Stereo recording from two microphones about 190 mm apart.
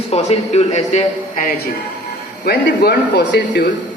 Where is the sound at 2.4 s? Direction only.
50° left (ahead or behind).